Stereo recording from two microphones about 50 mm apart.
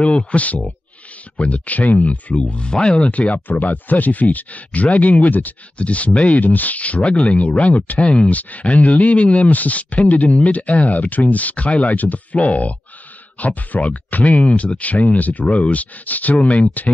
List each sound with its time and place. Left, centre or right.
0.0 s speech: left
2.5 s speech: centre
3.1 s speech: left
3.4 s speech: left
6.4 s speech: left
7.0 s speech: centre